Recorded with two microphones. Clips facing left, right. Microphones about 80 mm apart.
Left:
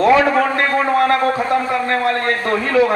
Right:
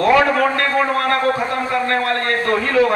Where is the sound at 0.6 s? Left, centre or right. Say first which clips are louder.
Left 2 dB; left.